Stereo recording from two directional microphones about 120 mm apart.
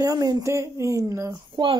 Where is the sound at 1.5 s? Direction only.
45° right (ahead or behind).